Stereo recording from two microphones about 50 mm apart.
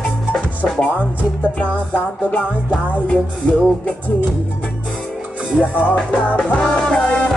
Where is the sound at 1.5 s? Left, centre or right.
Left.